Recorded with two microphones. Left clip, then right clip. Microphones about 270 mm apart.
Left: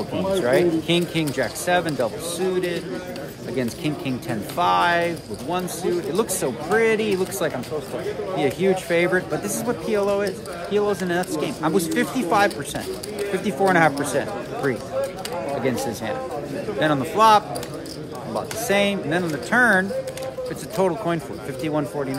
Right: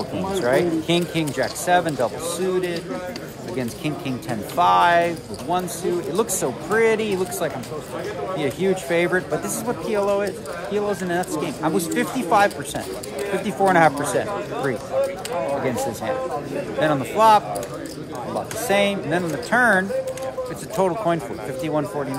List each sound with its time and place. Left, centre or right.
0.3 s speech: centre
15.0 s a sound: right
16.8 s speech: centre
18.7 s speech: centre